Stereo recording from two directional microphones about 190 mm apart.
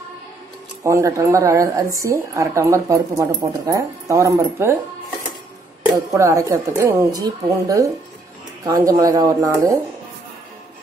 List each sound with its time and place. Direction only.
0.8 s a woman's voice: 15° right (ahead or behind)
6.1 s a woman's voice: 15° right (ahead or behind)